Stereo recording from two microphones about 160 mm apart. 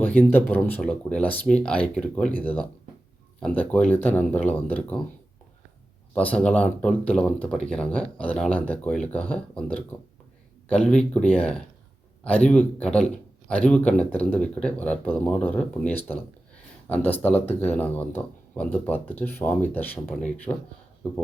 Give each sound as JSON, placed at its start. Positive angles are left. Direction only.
{"t": 0.0, "sound": "speech", "side_deg": 10}
{"t": 6.1, "sound": "speech", "side_deg": 10}